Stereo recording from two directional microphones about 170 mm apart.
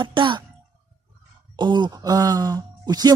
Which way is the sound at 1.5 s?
25° right (ahead or behind).